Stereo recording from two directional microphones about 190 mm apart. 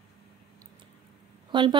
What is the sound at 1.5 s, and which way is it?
Speech, 25° right (ahead or behind).